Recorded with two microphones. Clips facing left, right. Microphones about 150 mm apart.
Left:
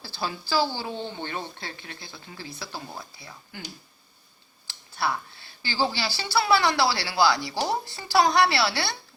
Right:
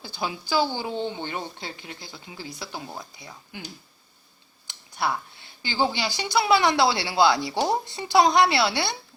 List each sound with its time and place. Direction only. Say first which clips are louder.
0.0 s a woman's voice: right 1 dB; 15° right (ahead or behind)
4.6 s a sound: right 1 dB; 20° right (ahead or behind)
5.6 s speech: right 2 dB; 20° right (ahead or behind)